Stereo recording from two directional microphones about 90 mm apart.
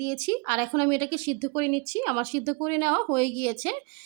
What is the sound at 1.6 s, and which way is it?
Speech, 35° left (ahead or behind).